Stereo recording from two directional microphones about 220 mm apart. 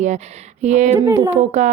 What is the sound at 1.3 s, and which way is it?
Speech, 30° right (ahead or behind).